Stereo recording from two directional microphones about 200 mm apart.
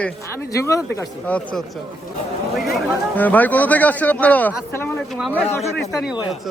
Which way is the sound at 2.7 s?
10° left (ahead or behind).